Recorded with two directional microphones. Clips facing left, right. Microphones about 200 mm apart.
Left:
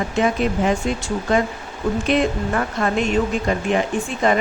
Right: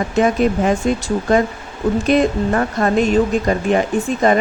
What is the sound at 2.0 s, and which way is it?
Speech, 40° right (ahead or behind).